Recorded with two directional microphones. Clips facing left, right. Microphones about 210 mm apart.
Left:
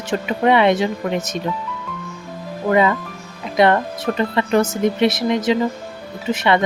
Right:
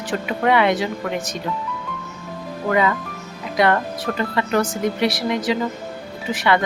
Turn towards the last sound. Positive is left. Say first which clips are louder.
# left 2 dB
turn(degrees=20)  # may be behind; listen again after turning